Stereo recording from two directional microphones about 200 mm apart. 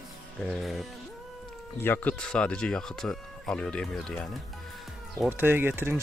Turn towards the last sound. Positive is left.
turn(degrees=-10)  # may be behind; listen again after turning